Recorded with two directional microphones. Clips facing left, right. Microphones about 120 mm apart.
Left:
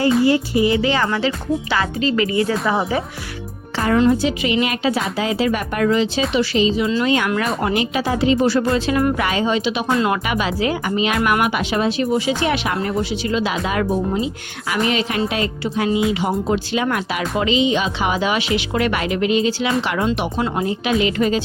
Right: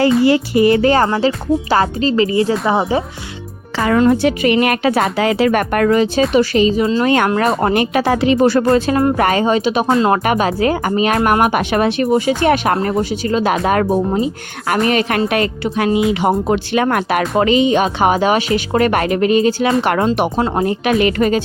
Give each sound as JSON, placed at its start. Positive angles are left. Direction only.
{"t": 0.0, "sound": "speech", "side_deg": -85}
{"t": 3.9, "sound": "speech", "side_deg": -60}
{"t": 7.3, "sound": "speech", "side_deg": -35}
{"t": 7.6, "sound": "speech", "side_deg": -55}
{"t": 8.7, "sound": "speech", "side_deg": -30}
{"t": 9.1, "sound": "speech", "side_deg": -50}